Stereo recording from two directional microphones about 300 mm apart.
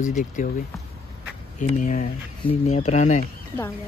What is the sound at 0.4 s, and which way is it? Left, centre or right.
Speech, left.